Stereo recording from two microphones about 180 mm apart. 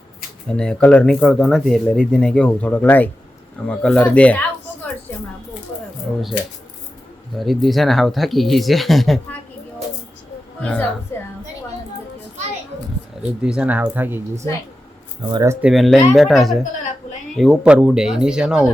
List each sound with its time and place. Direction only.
0.4 s speech: 5° left (ahead or behind)
7.3 s speech: centre (ahead or behind)
10.6 s a sound: 10° left (ahead or behind)
13.4 s speech: 5° right (ahead or behind)
15.3 s speech: 20° right (ahead or behind)
15.6 s speech: centre (ahead or behind)